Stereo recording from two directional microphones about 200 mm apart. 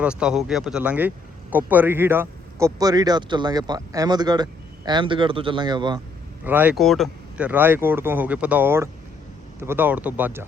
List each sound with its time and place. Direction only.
0.0 s a man's voice: 5° right (ahead or behind); by 6.0 s 20° right (ahead or behind)
6.4 s speech: 10° right (ahead or behind)